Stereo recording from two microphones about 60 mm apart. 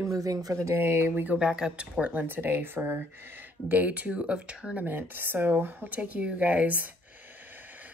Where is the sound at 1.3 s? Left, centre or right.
Centre.